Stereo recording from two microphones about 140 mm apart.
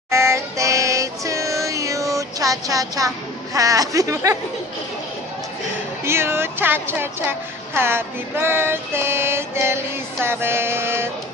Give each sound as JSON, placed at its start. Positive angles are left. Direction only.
{"t": 0.1, "sound": "music", "side_deg": -20}
{"t": 3.5, "sound": "speech", "side_deg": -25}
{"t": 6.0, "sound": "a woman's voice", "side_deg": -15}
{"t": 10.2, "sound": "a sound", "side_deg": -15}